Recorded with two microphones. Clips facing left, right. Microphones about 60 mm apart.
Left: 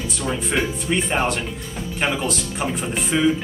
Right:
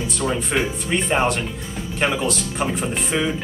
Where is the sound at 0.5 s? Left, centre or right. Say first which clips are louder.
Even; centre.